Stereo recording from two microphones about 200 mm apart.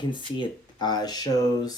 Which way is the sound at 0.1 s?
20° left (ahead or behind).